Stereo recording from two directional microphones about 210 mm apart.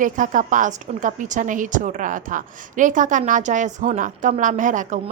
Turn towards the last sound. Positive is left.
turn(degrees=-35)  # may be behind; listen again after turning